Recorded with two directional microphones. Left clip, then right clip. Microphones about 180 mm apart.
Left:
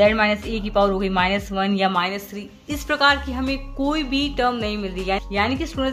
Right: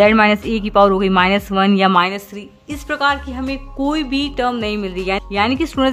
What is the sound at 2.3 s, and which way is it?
A woman's voice, 15° right (ahead or behind).